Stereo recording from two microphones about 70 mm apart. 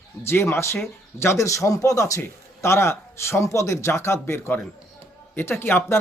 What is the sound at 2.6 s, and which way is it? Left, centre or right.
Speech, left.